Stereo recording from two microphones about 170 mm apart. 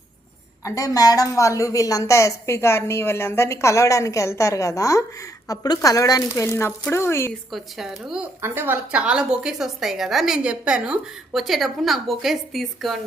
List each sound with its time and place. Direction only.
0.6 s a woman's voice: 20° left (ahead or behind)
7.5 s a woman's voice: centre (ahead or behind)
8.4 s a woman's voice: 15° right (ahead or behind)